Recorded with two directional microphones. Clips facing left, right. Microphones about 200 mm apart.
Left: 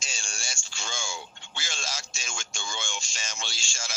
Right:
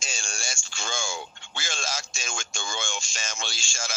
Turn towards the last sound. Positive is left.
turn(degrees=-50)  # may be behind; listen again after turning